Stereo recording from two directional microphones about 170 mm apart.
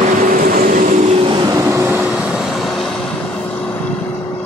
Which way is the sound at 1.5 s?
20° right (ahead or behind).